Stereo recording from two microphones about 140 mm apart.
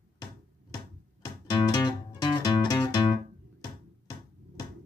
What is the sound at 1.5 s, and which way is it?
Music, 35° left (ahead or behind).